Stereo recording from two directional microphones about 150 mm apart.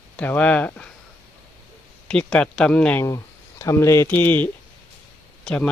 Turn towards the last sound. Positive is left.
turn(degrees=5)  # may be behind; listen again after turning